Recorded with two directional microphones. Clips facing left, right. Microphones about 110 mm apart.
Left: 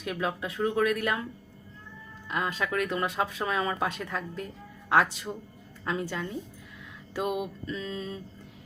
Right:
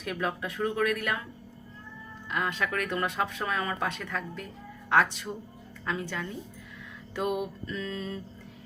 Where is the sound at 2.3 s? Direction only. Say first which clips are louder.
Left 1 dB; 25° left (ahead or behind).